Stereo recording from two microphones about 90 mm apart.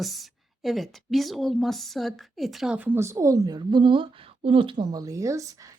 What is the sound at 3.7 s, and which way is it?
Speech, 60° right (ahead or behind).